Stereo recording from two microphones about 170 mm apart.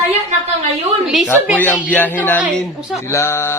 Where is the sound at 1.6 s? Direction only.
10° left (ahead or behind).